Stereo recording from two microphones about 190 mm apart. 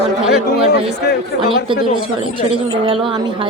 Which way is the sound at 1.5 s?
25° right (ahead or behind).